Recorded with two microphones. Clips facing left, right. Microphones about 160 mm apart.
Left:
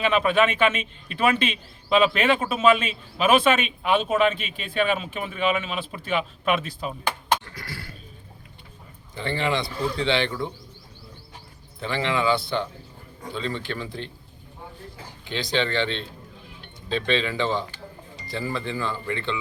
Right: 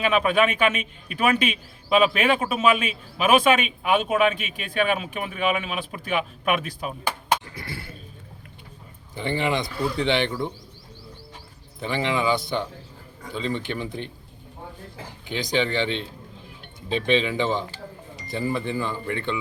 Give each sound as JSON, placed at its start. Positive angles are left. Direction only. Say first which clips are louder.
{"t": 0.0, "sound": "speech", "louder": "even", "side_deg": -10}
{"t": 7.5, "sound": "speech", "louder": "right 2 dB", "side_deg": -25}
{"t": 9.1, "sound": "speech", "louder": "right 1 dB", "side_deg": -15}
{"t": 11.8, "sound": "speech", "louder": "even", "side_deg": -15}
{"t": 15.3, "sound": "speech", "louder": "right 1 dB", "side_deg": -15}